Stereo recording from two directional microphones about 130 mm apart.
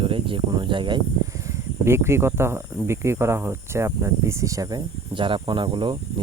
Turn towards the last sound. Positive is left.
turn(degrees=-40)  # may be behind; listen again after turning